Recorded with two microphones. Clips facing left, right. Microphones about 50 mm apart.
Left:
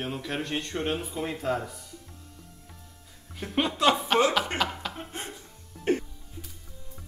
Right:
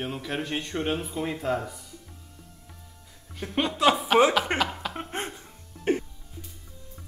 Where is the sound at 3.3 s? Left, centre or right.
Centre.